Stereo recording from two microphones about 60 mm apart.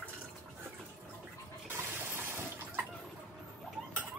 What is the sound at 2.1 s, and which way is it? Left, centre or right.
Water, right.